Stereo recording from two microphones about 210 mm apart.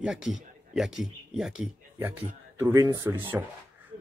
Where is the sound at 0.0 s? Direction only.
Centre (ahead or behind).